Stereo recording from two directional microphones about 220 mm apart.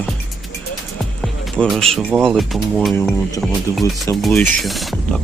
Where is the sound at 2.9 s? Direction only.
10° left (ahead or behind).